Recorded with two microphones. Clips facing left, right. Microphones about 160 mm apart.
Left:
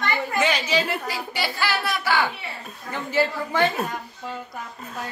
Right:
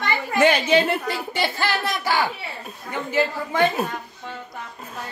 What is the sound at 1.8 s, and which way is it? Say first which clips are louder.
Speech: left 1 dB; 15° right (ahead or behind).